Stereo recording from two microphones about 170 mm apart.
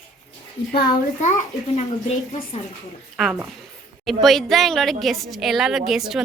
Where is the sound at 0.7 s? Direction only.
70° left (ahead or behind).